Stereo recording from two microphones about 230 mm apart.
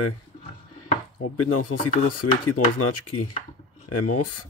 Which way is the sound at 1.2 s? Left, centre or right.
Left.